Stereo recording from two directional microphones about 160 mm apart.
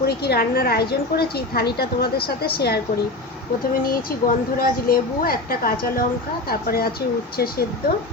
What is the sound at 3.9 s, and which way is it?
A woman's voice, 65° left (ahead or behind).